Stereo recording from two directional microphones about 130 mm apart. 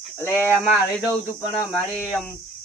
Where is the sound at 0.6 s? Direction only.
5° right (ahead or behind).